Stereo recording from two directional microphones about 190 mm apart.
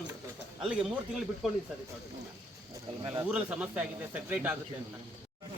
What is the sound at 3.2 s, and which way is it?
A man's voice, 5° right (ahead or behind).